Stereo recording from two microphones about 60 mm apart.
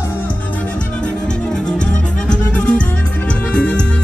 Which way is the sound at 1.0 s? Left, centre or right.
Centre.